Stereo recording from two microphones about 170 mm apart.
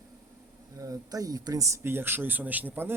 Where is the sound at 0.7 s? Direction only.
20° right (ahead or behind).